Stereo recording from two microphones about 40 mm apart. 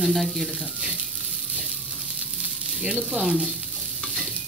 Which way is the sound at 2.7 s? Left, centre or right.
Centre.